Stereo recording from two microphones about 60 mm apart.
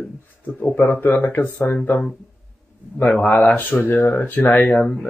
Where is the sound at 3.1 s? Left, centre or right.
Centre.